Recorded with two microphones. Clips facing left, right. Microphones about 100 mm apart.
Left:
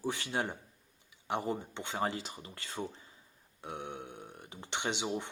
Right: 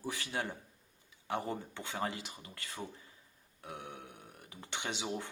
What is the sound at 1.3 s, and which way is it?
Speech, 20° left (ahead or behind).